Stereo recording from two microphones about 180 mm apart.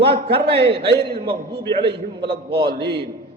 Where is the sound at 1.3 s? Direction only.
65° right (ahead or behind).